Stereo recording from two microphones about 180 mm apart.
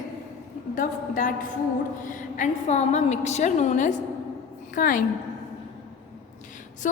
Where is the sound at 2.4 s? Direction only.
40° left (ahead or behind).